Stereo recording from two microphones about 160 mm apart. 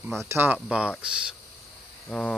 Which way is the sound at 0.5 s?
5° right (ahead or behind).